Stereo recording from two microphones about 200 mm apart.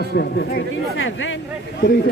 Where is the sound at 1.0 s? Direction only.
70° left (ahead or behind).